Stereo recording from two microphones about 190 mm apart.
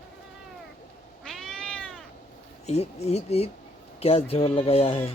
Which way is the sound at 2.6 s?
35° left (ahead or behind).